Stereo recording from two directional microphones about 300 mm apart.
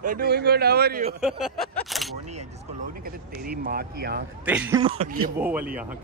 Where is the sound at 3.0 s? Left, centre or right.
Right.